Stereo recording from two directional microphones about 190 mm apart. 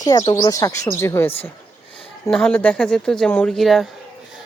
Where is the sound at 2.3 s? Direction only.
5° left (ahead or behind).